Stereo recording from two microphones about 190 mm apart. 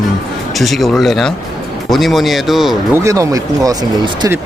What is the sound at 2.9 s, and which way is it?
Speech, 15° right (ahead or behind).